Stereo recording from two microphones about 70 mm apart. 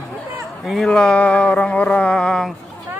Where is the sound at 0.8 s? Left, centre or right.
Centre.